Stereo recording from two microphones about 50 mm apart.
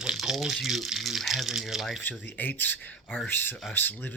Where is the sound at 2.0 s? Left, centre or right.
Left.